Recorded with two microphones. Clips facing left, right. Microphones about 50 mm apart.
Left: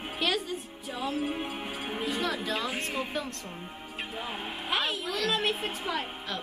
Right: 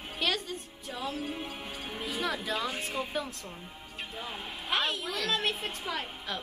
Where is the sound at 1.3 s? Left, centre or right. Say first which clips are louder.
Left 4 dB; left.